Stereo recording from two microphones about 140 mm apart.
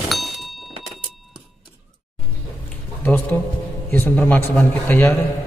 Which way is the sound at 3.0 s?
10° left (ahead or behind).